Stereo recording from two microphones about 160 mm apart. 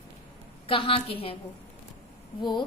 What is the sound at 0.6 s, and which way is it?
Speech, 35° left (ahead or behind).